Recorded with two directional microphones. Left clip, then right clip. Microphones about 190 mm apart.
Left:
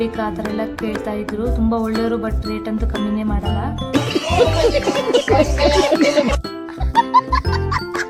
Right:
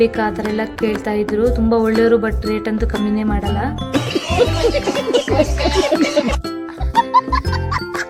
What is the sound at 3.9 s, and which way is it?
Music, centre (ahead or behind).